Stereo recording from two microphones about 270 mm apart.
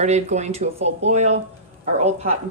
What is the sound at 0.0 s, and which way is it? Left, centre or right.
A woman's voice, right.